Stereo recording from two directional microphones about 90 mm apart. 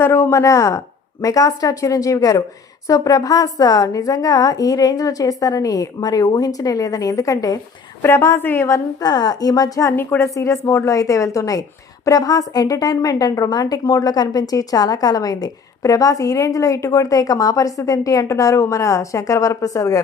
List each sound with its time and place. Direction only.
0.0 s a woman's voice: 30° left (ahead or behind)
8.0 s a woman's voice: 30° left (ahead or behind)
9.0 s speech: 50° left (ahead or behind)
9.9 s a woman's voice: 25° left (ahead or behind)
10.2 s a woman's voice: 35° left (ahead or behind)